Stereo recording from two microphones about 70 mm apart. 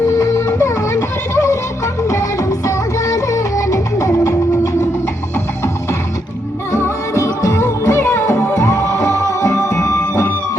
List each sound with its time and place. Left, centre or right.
0.2 s music: left
6.7 s music: left